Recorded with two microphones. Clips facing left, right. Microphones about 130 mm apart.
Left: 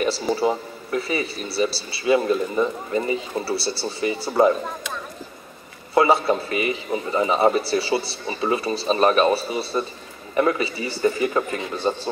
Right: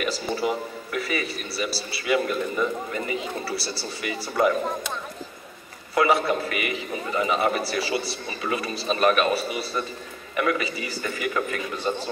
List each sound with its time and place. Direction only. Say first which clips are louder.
0.0 s speech: left 5 dB; 30° left (ahead or behind)
5.9 s a man's voice: left 3 dB; 30° left (ahead or behind)